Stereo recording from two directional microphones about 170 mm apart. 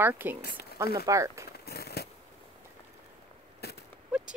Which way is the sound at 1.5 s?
65° left (ahead or behind).